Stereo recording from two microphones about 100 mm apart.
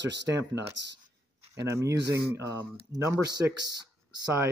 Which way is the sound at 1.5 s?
30° right (ahead or behind).